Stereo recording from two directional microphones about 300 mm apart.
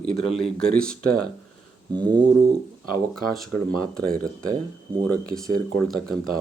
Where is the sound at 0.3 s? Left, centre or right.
Centre.